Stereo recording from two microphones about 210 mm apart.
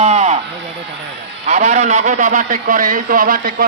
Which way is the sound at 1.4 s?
30° right (ahead or behind).